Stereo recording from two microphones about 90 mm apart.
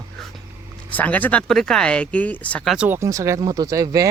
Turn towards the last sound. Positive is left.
turn(degrees=-40)  # may be behind; listen again after turning